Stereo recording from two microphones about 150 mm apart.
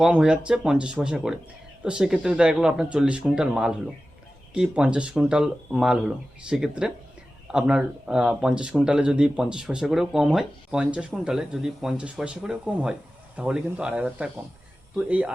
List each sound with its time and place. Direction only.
0.0 s speech: 5° right (ahead or behind)